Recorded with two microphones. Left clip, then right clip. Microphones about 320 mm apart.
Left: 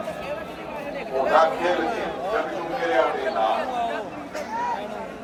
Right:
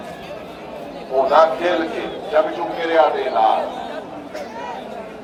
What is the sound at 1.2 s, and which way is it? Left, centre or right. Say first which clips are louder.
Speech: right 5 dB; centre.